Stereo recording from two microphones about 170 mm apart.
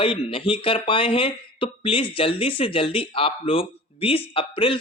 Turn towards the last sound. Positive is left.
turn(degrees=30)  # may be behind; listen again after turning